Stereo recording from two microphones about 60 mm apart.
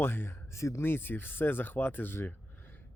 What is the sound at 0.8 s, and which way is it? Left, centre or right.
Speech, left.